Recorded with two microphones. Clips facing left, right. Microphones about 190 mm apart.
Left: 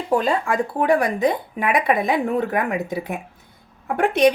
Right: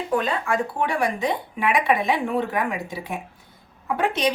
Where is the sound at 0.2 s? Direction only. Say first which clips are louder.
Left 3 dB; 35° left (ahead or behind).